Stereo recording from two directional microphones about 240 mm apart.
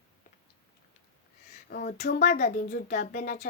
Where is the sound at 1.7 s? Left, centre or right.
Left.